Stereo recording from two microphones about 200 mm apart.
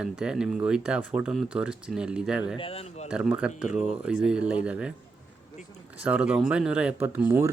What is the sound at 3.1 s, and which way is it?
Speech, 5° right (ahead or behind).